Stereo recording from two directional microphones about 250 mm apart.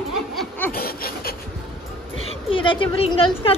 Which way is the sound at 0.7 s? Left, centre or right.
Left.